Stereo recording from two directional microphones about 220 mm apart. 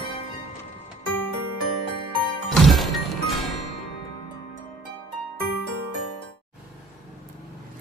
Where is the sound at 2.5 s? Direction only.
Centre (ahead or behind).